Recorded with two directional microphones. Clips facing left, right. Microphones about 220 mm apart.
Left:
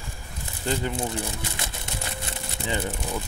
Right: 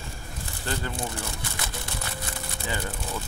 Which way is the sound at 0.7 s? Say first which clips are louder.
Left 5 dB; 20° left (ahead or behind).